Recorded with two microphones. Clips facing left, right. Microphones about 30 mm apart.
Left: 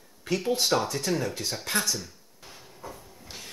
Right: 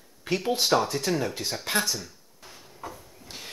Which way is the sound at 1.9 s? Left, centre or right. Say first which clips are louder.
Even; centre.